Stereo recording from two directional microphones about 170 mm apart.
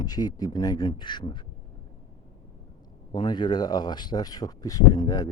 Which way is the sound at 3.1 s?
25° left (ahead or behind).